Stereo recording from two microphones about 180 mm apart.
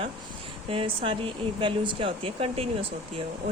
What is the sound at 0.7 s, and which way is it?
Speech, 30° right (ahead or behind).